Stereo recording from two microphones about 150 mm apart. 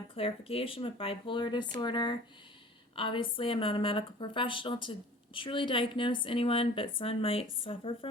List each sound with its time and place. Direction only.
0.1 s a woman's voice: 40° left (ahead or behind)